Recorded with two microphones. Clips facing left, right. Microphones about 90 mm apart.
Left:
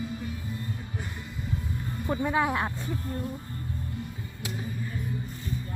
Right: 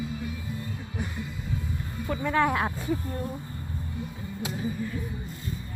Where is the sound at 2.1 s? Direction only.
20° left (ahead or behind).